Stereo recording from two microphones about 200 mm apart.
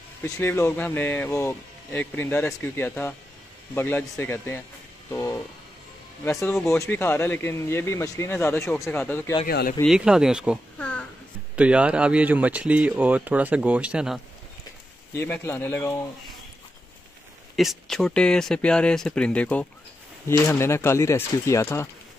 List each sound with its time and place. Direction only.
0.2 s speech: 10° left (ahead or behind)
9.5 s speech: 50° left (ahead or behind)
9.8 s speech: 5° right (ahead or behind)
10.8 s a sound: 5° left (ahead or behind)
11.5 s speech: 5° right (ahead or behind)
15.1 s speech: 10° left (ahead or behind)
17.6 s speech: centre (ahead or behind)